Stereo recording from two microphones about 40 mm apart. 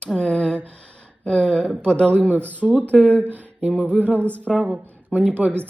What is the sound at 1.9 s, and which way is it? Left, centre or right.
Speech, left.